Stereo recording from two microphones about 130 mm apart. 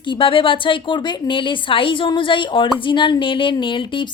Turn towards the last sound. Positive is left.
turn(degrees=40)  # may be behind; listen again after turning